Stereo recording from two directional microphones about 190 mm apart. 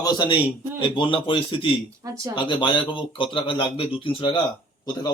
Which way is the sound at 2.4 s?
25° left (ahead or behind).